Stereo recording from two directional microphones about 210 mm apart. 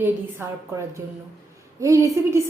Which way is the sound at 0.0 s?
10° right (ahead or behind).